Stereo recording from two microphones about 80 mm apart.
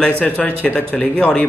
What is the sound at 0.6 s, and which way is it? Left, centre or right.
Speech, centre.